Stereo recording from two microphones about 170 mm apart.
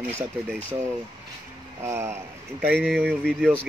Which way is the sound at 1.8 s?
15° right (ahead or behind).